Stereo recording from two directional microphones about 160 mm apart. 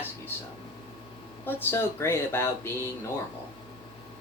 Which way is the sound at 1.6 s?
15° left (ahead or behind).